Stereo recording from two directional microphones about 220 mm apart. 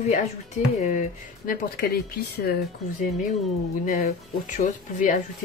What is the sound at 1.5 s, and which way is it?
Speech, 40° left (ahead or behind).